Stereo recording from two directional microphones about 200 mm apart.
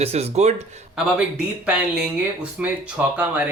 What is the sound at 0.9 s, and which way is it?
Speech, 5° right (ahead or behind).